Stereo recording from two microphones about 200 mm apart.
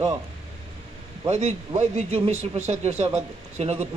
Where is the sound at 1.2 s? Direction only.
35° right (ahead or behind).